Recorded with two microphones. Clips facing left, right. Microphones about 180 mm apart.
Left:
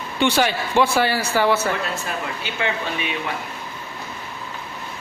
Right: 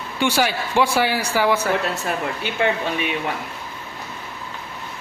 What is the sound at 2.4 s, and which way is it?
Speech, 50° right (ahead or behind).